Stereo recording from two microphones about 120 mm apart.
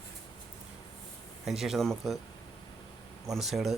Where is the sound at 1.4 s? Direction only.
5° right (ahead or behind).